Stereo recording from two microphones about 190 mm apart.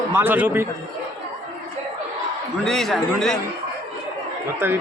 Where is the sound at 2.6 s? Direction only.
Centre (ahead or behind).